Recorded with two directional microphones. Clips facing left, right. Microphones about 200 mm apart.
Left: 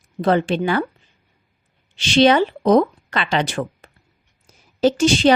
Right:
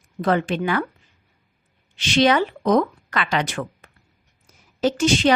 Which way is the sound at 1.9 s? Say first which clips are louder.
Left 4 dB; 30° left (ahead or behind).